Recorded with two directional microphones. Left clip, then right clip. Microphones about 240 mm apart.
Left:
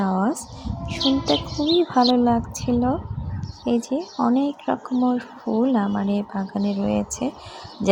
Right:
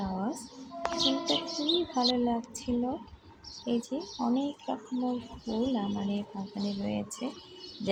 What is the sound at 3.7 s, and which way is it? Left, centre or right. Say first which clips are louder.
Speech: left 10 dB; left.